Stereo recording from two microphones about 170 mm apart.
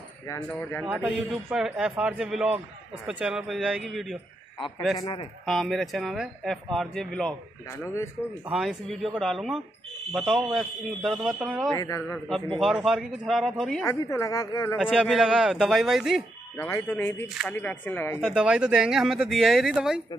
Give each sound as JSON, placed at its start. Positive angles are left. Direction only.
{"t": 0.3, "sound": "speech", "side_deg": 10}
{"t": 0.8, "sound": "speech", "side_deg": -5}
{"t": 5.0, "sound": "speech", "side_deg": 35}
{"t": 5.4, "sound": "speech", "side_deg": 0}
{"t": 8.5, "sound": "speech", "side_deg": 0}
{"t": 11.7, "sound": "speech", "side_deg": 20}
{"t": 12.5, "sound": "speech", "side_deg": -5}
{"t": 13.8, "sound": "speech", "side_deg": 20}
{"t": 14.8, "sound": "speech", "side_deg": -5}
{"t": 16.5, "sound": "speech", "side_deg": 15}
{"t": 18.2, "sound": "speech", "side_deg": -5}